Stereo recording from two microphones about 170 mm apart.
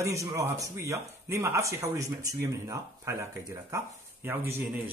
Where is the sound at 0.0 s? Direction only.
20° right (ahead or behind).